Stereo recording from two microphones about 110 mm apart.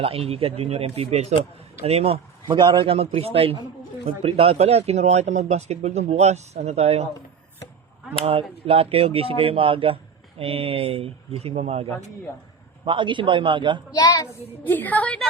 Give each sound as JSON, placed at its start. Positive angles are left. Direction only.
{"t": 0.0, "sound": "speech", "side_deg": -60}
{"t": 2.5, "sound": "speech", "side_deg": -45}
{"t": 8.2, "sound": "speech", "side_deg": -60}
{"t": 12.8, "sound": "a man's voice", "side_deg": -50}
{"t": 13.9, "sound": "a woman's voice", "side_deg": 30}
{"t": 14.6, "sound": "a woman's voice", "side_deg": 15}